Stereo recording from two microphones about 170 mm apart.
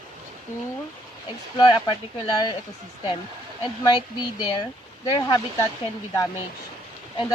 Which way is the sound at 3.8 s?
25° left (ahead or behind).